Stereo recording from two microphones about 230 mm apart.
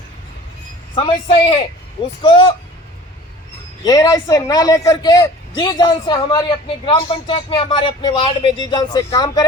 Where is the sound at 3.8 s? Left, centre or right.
Centre.